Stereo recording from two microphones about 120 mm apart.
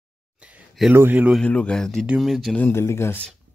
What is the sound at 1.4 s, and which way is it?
Speech, 10° left (ahead or behind).